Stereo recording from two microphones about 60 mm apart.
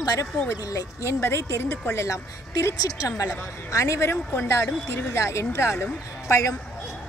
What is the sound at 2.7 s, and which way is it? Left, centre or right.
A woman's voice, left.